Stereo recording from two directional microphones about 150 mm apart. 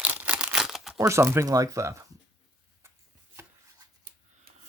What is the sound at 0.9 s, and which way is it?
Speech, 20° right (ahead or behind).